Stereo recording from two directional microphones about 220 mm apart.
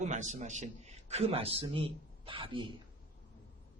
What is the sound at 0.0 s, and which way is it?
A man's voice, 35° right (ahead or behind).